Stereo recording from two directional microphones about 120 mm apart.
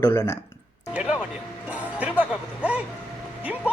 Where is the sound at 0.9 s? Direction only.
10° right (ahead or behind).